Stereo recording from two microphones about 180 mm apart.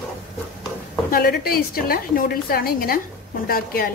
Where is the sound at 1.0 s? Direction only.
60° left (ahead or behind).